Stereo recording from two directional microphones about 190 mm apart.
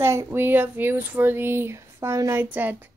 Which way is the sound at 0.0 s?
15° right (ahead or behind).